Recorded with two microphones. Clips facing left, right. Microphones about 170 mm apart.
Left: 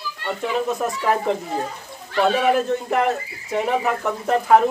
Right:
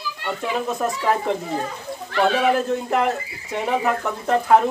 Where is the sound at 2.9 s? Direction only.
Centre (ahead or behind).